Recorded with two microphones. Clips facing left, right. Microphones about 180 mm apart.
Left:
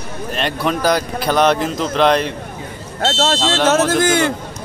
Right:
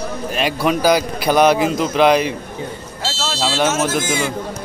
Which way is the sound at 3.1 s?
60° left (ahead or behind).